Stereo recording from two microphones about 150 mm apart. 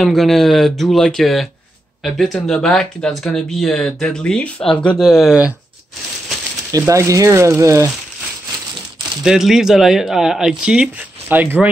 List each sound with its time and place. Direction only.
0.0 s speech: centre (ahead or behind)
6.7 s speech: 20° right (ahead or behind)
9.2 s speech: 5° right (ahead or behind)